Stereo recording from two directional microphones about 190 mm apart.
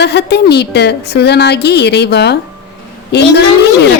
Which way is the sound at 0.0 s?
60° left (ahead or behind).